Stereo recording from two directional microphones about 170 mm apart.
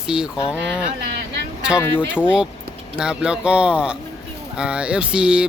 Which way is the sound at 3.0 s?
5° right (ahead or behind).